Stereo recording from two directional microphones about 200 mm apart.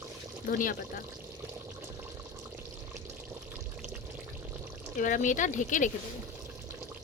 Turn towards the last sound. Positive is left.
turn(degrees=40)  # may be behind; listen again after turning